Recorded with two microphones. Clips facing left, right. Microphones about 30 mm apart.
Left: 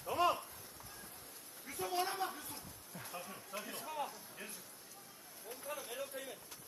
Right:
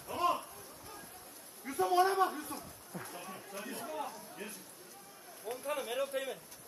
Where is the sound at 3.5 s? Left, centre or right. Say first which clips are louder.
Even; left.